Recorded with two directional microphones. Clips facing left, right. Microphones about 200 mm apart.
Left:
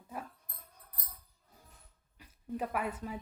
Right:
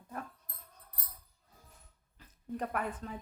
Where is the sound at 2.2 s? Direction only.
5° left (ahead or behind).